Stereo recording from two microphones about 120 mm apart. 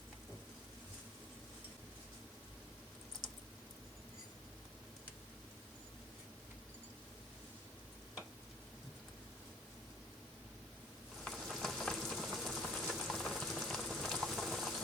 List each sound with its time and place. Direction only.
11.2 s frying: centre (ahead or behind)